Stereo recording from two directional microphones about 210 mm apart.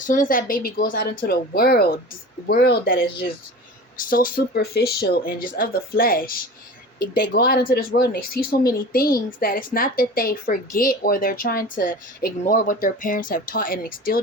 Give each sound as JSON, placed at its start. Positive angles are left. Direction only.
{"t": 0.0, "sound": "a woman's voice", "side_deg": 40}